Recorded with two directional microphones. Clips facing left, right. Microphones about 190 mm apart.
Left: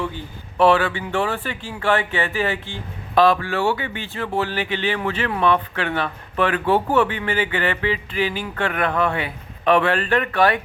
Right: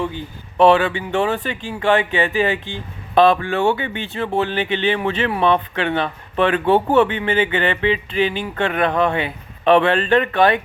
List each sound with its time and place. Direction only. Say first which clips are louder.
0.5 s speech: right 3 dB; 20° right (ahead or behind)